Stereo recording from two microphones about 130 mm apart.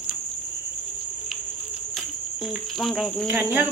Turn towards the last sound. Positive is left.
turn(degrees=-15)  # may be behind; listen again after turning